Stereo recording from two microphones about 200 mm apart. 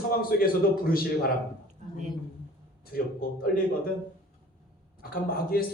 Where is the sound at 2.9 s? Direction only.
45° left (ahead or behind).